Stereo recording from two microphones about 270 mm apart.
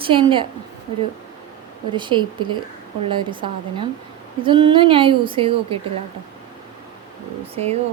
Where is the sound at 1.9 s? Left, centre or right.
Centre.